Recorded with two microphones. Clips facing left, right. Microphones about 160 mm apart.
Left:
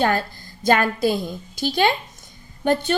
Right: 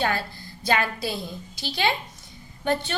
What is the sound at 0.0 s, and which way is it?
A woman's voice, 45° left (ahead or behind).